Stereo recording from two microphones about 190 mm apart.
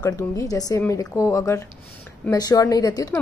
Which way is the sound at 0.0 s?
20° left (ahead or behind).